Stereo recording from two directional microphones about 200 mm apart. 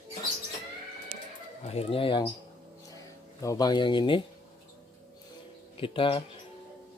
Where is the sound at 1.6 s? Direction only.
30° left (ahead or behind).